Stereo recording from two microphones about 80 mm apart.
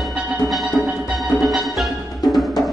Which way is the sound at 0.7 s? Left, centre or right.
Centre.